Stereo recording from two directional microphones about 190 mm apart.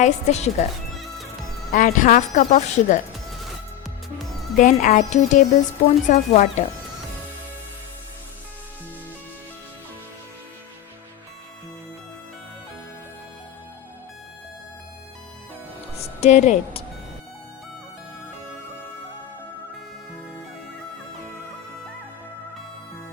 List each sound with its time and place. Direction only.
0.0 s speech: 35° left (ahead or behind)
1.7 s speech: 45° left (ahead or behind)
4.5 s speech: 40° left (ahead or behind)
16.0 s a woman's voice: 35° left (ahead or behind)